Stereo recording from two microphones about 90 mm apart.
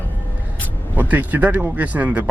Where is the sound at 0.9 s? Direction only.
20° right (ahead or behind).